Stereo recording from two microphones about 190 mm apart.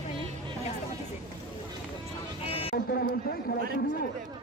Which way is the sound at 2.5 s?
30° left (ahead or behind).